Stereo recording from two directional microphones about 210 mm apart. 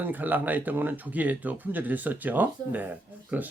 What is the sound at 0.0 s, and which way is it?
Speech, 10° right (ahead or behind).